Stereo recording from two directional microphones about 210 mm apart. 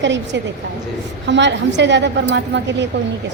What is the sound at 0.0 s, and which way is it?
A woman's voice, 60° right (ahead or behind).